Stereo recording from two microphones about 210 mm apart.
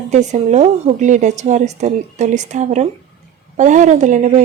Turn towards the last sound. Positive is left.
turn(degrees=-35)  # may be behind; listen again after turning